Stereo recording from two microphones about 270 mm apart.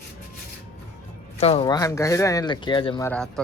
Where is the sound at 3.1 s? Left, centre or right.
Centre.